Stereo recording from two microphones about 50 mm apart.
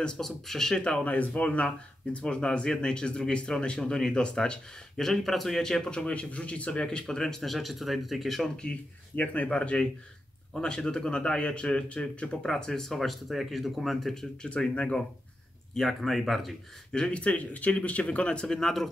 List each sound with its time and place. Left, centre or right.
0.0 s speech: centre
1.0 s speech: left; by 8.5 s centre
9.1 s speech: left; by 14.2 s centre
14.4 s speech: left
15.7 s speech: centre
16.9 s speech: left
18.5 s speech: centre